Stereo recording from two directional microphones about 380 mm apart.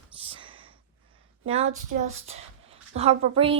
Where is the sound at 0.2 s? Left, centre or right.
Centre.